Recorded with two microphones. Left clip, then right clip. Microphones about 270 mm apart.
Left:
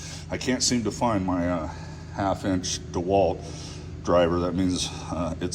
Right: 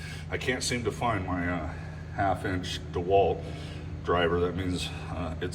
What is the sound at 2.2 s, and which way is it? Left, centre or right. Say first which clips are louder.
Speech: left 2 dB; centre.